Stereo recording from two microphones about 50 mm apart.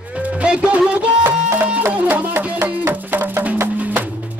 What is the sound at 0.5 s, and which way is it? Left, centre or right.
Music, centre.